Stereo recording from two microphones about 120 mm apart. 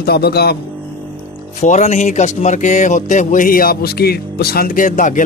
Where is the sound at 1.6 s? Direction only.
85° left.